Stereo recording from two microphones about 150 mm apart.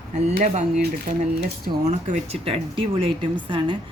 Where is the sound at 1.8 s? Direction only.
50° right (ahead or behind).